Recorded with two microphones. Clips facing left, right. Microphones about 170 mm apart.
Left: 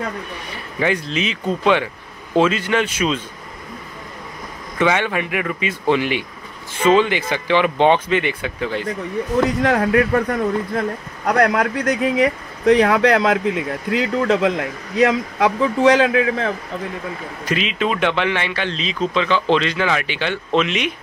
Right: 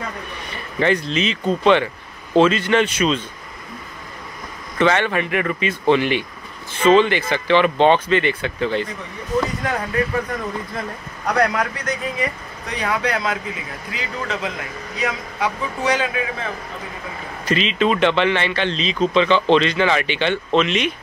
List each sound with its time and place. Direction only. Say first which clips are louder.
0.7 s speech: right 2 dB; 5° left (ahead or behind)
4.7 s speech: right 1 dB; 10° left (ahead or behind)
9.6 s speech: left 6 dB; 75° left (ahead or behind)
11.2 s speech: left 3 dB; 60° left (ahead or behind); by 16.5 s 80° left
17.5 s speech: right 2 dB; 10° left (ahead or behind)